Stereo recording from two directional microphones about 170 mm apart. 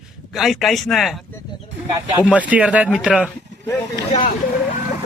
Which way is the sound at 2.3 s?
10° right (ahead or behind).